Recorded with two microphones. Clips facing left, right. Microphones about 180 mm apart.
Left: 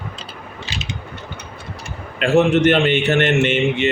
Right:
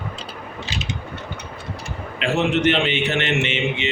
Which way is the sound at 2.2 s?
45° left (ahead or behind).